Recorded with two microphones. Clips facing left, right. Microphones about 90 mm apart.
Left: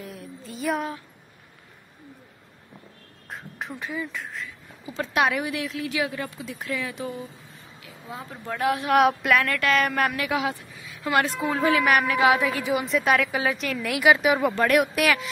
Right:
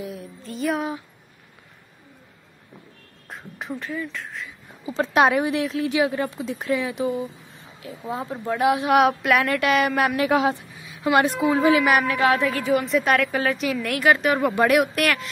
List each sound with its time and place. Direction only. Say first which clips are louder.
0.0 s music: right 4 dB; centre (ahead or behind)
3.3 s speech: right 1 dB; centre (ahead or behind)
3.7 s speech: right 3 dB; 15° left (ahead or behind)
4.8 s speech: right 5 dB; 30° right (ahead or behind)
8.9 s a woman's voice: left 1 dB; centre (ahead or behind)
9.4 s speech: right 3 dB; 15° right (ahead or behind)
10.1 s speech: right 6 dB; 30° right (ahead or behind)
10.8 s a woman's voice: right 4 dB; 20° right (ahead or behind)
11.5 s a woman's voice: right 2 dB; 5° right (ahead or behind)
12.3 s speech: right 1 dB; 10° left (ahead or behind)
12.8 s a woman's voice: right 2 dB; centre (ahead or behind)
14.5 s speech: right 3 dB; 10° right (ahead or behind)
14.8 s a woman's voice: right 1 dB; centre (ahead or behind)